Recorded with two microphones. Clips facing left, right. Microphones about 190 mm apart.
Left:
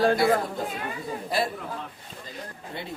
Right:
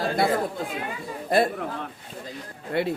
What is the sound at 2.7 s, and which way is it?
Speech, 65° right (ahead or behind).